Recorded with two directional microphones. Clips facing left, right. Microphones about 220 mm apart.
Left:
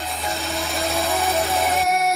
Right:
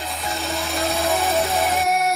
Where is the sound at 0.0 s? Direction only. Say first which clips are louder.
Even; centre (ahead or behind).